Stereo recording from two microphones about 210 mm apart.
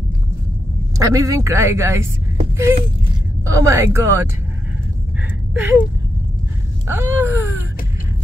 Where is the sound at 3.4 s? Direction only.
15° right (ahead or behind).